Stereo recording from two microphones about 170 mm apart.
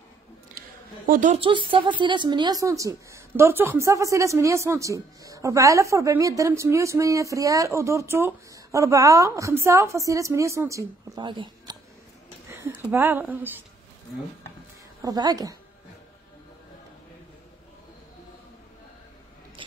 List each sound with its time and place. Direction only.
0.6 s a sound: 55° right (ahead or behind)
2.0 s a woman's voice: 30° right (ahead or behind)
12.4 s speech: 10° right (ahead or behind)
15.0 s a woman's voice: 20° right (ahead or behind)